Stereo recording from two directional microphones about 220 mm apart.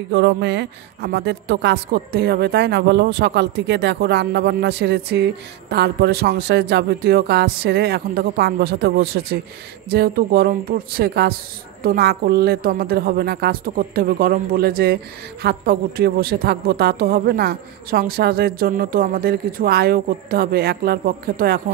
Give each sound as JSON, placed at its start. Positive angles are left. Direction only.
{"t": 0.1, "sound": "a woman's voice", "side_deg": -50}